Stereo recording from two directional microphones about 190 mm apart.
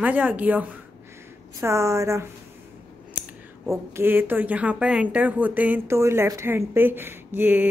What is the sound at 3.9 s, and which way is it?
Speech, 10° right (ahead or behind).